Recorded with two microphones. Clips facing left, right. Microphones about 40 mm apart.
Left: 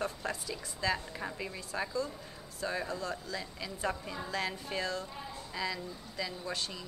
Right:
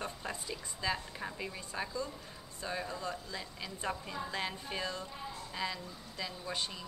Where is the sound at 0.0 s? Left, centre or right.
Centre.